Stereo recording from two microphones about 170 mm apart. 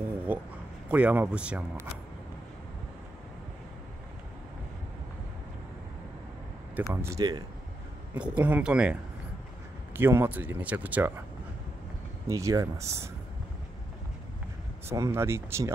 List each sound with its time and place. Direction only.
0.3 s speech: 10° right (ahead or behind)
6.9 s speech: 15° right (ahead or behind)
8.1 s speech: 10° right (ahead or behind)
9.9 s speech: 15° right (ahead or behind)
12.3 s speech: 20° right (ahead or behind)
14.9 s speech: 15° right (ahead or behind)